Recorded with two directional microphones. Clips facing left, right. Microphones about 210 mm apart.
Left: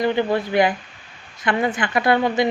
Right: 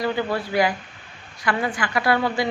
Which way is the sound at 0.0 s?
20° left (ahead or behind).